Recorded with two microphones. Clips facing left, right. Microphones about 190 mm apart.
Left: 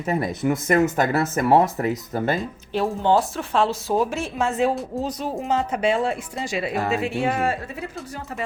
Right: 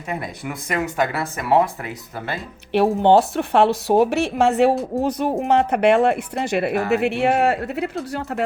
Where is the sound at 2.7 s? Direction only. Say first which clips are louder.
Right 5 dB; 65° right (ahead or behind).